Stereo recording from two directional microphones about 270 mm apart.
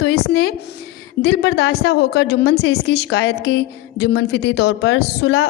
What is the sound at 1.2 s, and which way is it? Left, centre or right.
A woman's voice, left.